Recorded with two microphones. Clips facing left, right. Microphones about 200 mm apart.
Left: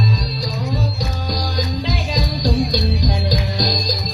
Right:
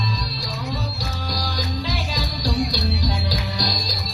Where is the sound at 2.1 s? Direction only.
20° left (ahead or behind).